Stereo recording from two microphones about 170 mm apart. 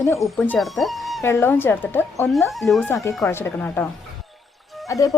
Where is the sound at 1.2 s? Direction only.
15° left (ahead or behind).